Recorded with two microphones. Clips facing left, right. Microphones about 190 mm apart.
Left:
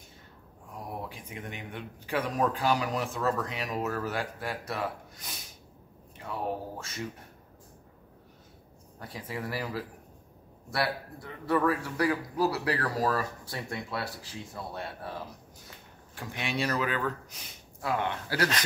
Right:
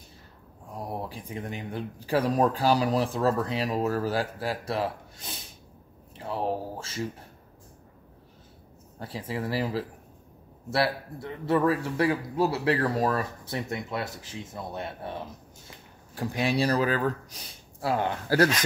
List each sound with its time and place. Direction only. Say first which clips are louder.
0.7 s speech: right 4 dB; 35° right (ahead or behind)
9.0 s speech: right 5 dB; 30° right (ahead or behind)
16.2 s speech: right 7 dB; 35° right (ahead or behind)